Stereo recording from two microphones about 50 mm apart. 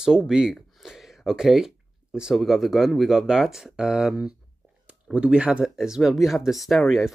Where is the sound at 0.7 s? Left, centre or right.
Centre.